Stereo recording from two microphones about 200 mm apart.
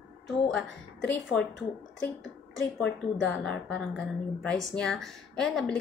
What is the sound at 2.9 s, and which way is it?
Speech, 65° left (ahead or behind).